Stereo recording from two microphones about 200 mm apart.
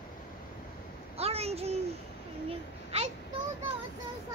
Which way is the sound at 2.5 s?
30° right (ahead or behind).